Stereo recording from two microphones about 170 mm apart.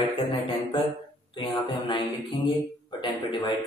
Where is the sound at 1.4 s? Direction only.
30° left (ahead or behind).